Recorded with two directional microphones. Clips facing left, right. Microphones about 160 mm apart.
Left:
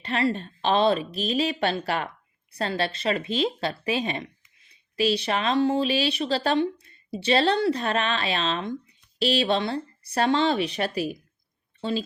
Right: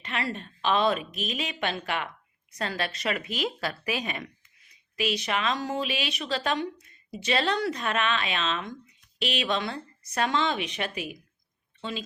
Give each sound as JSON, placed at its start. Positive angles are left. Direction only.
{"t": 0.0, "sound": "a woman's voice", "side_deg": 30}